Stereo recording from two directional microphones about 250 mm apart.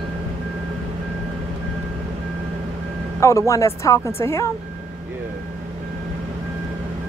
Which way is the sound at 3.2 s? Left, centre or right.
Centre.